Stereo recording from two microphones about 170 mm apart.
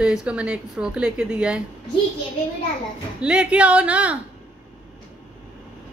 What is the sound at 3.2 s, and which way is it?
Speech, 5° right (ahead or behind).